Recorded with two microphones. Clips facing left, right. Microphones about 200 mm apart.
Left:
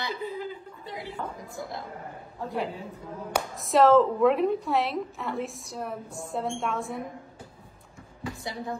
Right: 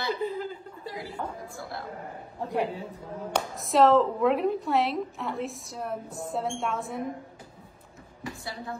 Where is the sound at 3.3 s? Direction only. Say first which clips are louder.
Left 1 dB; centre (ahead or behind).